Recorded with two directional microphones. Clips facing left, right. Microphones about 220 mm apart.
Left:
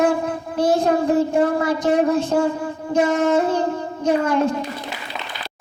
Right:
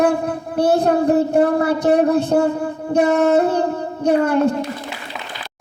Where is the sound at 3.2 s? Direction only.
40° right (ahead or behind).